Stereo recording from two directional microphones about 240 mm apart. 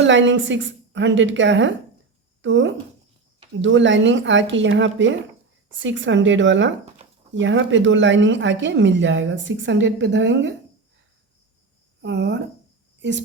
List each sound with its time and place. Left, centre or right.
0.0 s speech: right
12.0 s a woman's voice: right